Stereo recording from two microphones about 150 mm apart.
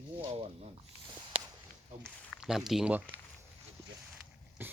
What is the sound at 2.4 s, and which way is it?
Speech, centre (ahead or behind).